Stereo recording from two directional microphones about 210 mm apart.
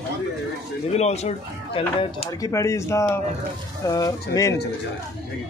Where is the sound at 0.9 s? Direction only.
30° left (ahead or behind); by 4.6 s 15° left (ahead or behind).